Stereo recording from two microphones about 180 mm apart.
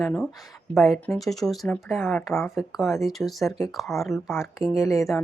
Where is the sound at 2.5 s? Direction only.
Centre (ahead or behind).